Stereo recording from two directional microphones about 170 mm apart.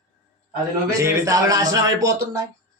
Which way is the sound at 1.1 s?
20° right (ahead or behind).